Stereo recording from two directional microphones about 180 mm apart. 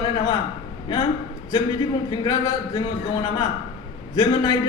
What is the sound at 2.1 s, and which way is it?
Speech, 25° left (ahead or behind).